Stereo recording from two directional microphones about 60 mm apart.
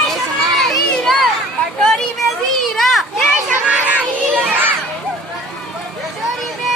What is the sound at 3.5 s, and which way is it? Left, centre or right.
Children playing, right.